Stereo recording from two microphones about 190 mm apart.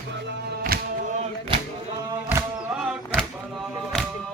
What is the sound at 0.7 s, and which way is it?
Music, 50° right (ahead or behind).